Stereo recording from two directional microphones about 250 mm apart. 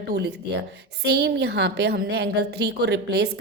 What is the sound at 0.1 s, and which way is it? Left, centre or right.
A woman's voice, right.